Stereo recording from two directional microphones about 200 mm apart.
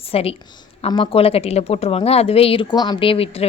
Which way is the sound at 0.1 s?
30° left (ahead or behind).